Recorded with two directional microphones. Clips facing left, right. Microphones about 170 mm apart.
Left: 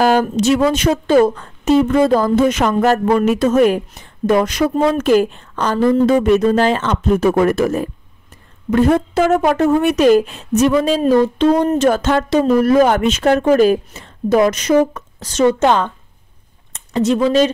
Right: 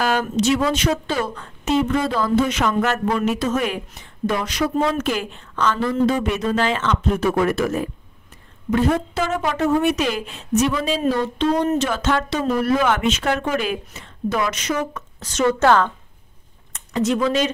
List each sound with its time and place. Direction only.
0.0 s speech: 40° left (ahead or behind)
8.6 s speech: 55° left (ahead or behind); by 15.4 s 35° left (ahead or behind)
15.4 s a woman's voice: 20° left (ahead or behind)
16.7 s speech: 30° left (ahead or behind)